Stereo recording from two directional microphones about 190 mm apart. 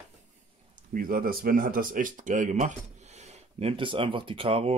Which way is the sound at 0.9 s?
50° right (ahead or behind).